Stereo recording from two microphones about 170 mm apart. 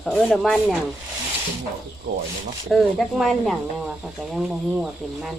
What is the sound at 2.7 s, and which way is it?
Speech, centre (ahead or behind).